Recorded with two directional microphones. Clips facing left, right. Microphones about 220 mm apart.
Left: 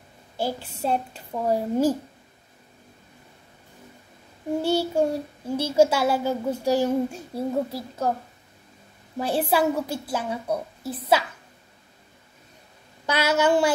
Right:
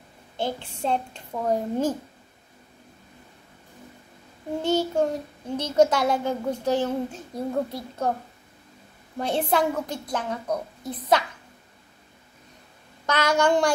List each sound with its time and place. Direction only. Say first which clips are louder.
0.4 s child singing: left 1 dB; 5° left (ahead or behind)
4.6 s child singing: even; 10° left (ahead or behind)
9.2 s child singing: left 1 dB; 5° left (ahead or behind)
13.0 s a woman's voice: even; 10° left (ahead or behind)